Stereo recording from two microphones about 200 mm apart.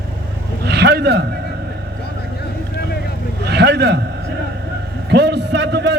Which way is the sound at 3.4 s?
55° right (ahead or behind).